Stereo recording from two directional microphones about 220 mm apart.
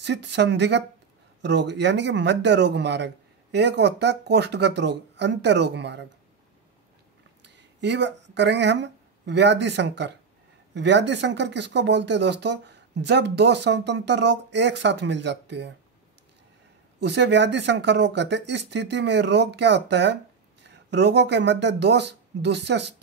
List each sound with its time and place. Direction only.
0.0 s speech: 50° right (ahead or behind)
7.4 s speech: 50° right (ahead or behind)
17.0 s speech: 50° right (ahead or behind)